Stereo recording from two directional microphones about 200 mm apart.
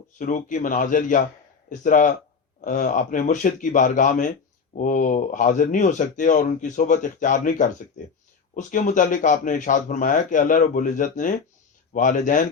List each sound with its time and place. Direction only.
0.2 s speech: 40° left (ahead or behind)